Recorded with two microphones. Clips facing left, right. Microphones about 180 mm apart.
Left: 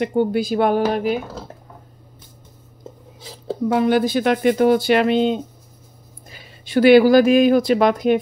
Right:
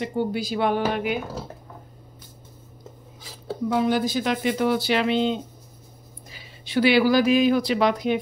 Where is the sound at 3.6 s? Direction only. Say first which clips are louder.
Left 5 dB; 65° left (ahead or behind).